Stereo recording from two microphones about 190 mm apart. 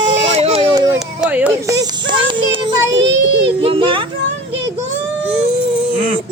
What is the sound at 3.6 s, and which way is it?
Speech, 30° right (ahead or behind).